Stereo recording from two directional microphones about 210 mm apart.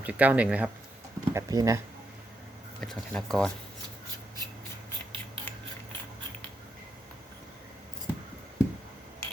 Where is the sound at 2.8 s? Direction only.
5° left (ahead or behind).